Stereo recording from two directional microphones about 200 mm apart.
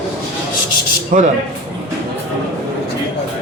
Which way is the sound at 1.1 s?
40° right (ahead or behind).